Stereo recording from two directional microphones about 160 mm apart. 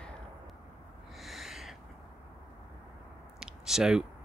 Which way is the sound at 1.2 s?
Centre (ahead or behind).